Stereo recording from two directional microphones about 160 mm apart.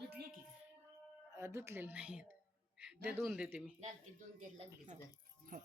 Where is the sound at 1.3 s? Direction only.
20° right (ahead or behind).